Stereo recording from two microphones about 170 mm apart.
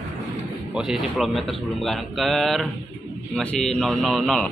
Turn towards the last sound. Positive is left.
turn(degrees=0)  # may be behind; listen again after turning